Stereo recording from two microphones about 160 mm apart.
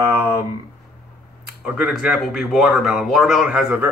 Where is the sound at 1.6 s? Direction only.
5° right (ahead or behind).